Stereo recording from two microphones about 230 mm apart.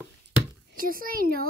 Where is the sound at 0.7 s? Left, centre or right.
Right.